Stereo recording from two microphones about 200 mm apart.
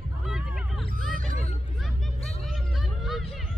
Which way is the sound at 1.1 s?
40° right (ahead or behind).